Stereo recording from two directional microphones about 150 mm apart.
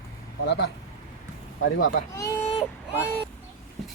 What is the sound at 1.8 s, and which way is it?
Speech, 65° left (ahead or behind).